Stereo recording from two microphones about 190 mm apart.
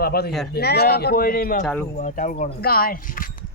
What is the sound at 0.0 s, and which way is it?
A man's voice, 55° left (ahead or behind).